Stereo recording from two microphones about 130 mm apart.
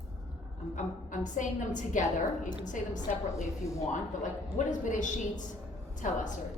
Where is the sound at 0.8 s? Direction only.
75° left (ahead or behind).